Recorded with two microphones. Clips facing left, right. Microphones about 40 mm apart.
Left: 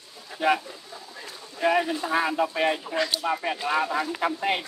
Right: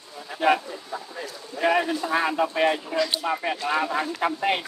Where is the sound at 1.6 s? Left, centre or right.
Centre.